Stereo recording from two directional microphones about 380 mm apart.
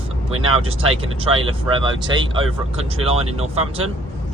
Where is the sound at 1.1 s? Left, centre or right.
Centre.